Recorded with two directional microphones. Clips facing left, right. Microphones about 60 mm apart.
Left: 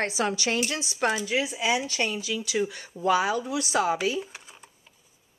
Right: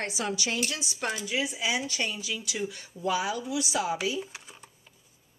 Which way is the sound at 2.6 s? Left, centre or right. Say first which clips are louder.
Left 5 dB; left.